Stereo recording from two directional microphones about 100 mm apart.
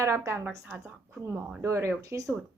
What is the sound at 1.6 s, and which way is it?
Speech, 25° right (ahead or behind).